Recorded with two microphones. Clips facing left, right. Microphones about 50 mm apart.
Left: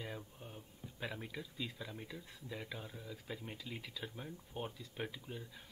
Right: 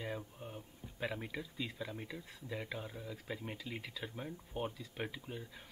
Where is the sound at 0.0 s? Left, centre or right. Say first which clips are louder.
Right 4 dB; centre.